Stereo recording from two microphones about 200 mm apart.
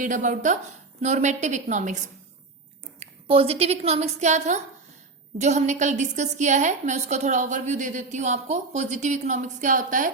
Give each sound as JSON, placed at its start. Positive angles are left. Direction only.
{"t": 0.0, "sound": "a woman's voice", "side_deg": -40}
{"t": 3.0, "sound": "a woman's voice", "side_deg": -30}